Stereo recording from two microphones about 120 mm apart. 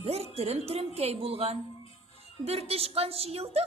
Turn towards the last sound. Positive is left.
turn(degrees=-60)  # may be behind; listen again after turning